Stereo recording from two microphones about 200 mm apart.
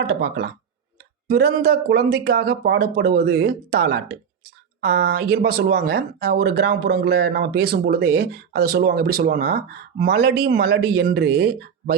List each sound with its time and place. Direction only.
0.0 s speech: 55° right (ahead or behind)